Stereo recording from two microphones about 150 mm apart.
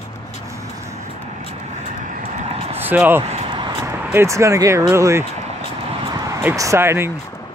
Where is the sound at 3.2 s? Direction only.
45° right (ahead or behind).